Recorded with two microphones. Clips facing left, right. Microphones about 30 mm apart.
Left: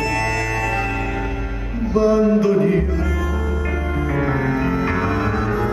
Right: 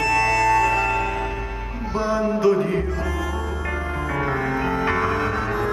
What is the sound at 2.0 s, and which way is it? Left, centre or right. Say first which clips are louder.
Music: left 6 dB; centre.